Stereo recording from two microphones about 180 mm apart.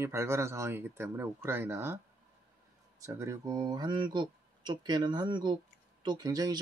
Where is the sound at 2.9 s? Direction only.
15° right (ahead or behind).